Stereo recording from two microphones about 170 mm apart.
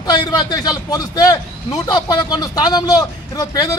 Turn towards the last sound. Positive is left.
turn(degrees=20)  # may be behind; listen again after turning